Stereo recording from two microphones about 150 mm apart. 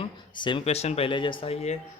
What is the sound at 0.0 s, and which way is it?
Speech, 35° left (ahead or behind).